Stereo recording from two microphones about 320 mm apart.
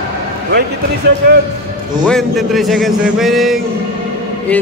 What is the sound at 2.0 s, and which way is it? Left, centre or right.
A man's voice, centre.